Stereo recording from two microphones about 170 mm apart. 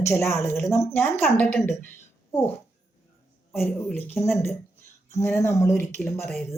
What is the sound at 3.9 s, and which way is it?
Speech, 10° left (ahead or behind).